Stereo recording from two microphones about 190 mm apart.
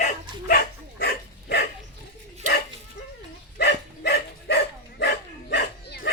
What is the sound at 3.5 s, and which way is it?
Dog, 60° left (ahead or behind).